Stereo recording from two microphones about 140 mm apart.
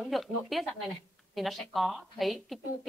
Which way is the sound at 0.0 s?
Centre (ahead or behind).